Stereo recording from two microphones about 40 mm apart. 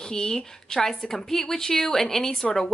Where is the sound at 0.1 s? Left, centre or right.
Centre.